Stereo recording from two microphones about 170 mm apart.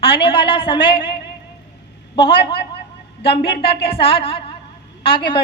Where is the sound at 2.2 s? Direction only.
30° left (ahead or behind).